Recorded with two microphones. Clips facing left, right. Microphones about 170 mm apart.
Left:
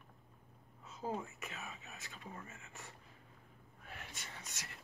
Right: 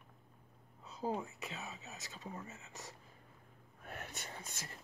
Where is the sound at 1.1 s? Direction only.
15° right (ahead or behind).